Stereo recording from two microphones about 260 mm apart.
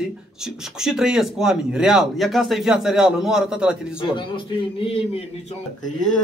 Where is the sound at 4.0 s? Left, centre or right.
Centre.